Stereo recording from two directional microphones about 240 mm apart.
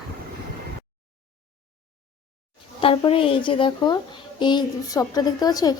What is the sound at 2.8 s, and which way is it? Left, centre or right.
A woman's voice, left.